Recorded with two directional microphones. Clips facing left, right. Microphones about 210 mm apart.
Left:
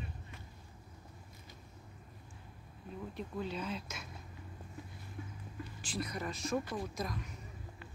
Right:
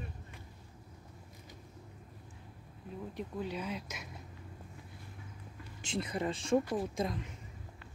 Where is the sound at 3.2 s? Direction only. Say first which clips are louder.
Right 1 dB; 15° right (ahead or behind).